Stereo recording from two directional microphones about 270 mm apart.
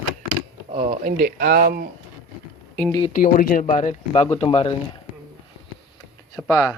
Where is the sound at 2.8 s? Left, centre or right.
Centre.